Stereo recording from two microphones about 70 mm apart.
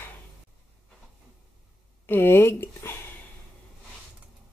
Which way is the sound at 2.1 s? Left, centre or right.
Left.